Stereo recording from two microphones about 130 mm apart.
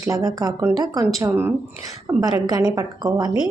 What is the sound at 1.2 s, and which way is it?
A woman's voice, 15° right (ahead or behind).